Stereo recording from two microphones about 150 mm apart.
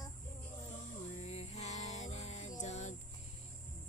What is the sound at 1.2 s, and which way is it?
Music, 45° left (ahead or behind).